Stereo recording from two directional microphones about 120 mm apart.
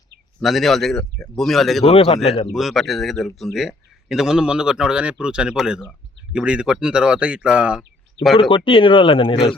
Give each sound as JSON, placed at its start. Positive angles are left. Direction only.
{"t": 0.3, "sound": "speech", "side_deg": 0}
{"t": 1.8, "sound": "speech", "side_deg": 55}
{"t": 2.5, "sound": "speech", "side_deg": 0}
{"t": 8.4, "sound": "speech", "side_deg": 45}